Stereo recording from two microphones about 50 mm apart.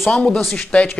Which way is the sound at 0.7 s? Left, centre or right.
Left.